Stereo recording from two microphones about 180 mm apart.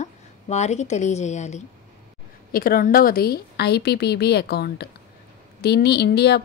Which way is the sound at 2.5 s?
50° left (ahead or behind).